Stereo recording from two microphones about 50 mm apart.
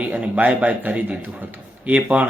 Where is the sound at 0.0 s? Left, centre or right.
Right.